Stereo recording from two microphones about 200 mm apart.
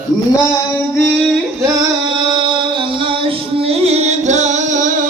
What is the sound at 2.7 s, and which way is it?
Music, 25° right (ahead or behind).